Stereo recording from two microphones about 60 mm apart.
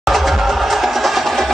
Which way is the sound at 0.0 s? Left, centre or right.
Centre.